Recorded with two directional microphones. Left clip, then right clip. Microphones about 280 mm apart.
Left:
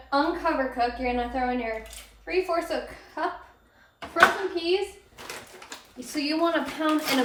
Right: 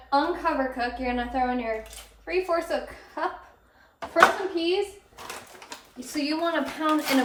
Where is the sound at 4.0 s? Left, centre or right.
Right.